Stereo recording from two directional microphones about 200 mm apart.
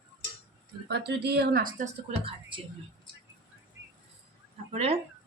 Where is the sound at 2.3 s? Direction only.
25° right (ahead or behind).